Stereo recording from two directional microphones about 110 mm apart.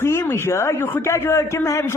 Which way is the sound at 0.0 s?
25° left (ahead or behind).